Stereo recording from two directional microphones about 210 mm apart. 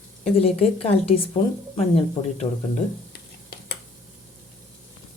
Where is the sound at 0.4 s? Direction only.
30° left (ahead or behind).